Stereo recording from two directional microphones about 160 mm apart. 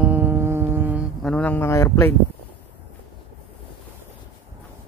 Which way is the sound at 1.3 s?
10° left (ahead or behind).